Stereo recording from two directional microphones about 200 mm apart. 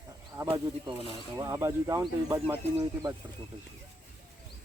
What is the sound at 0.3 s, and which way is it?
Speech, 15° right (ahead or behind).